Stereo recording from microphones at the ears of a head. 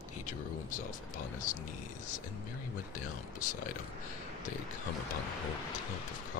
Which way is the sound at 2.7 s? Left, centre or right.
Left.